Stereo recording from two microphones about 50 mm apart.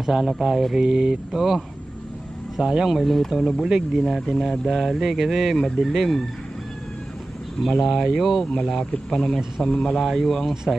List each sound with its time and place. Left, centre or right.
0.0 s speech: centre
2.6 s speech: centre
2.9 s speech: centre
3.6 s speech: centre
7.8 s a man's voice: centre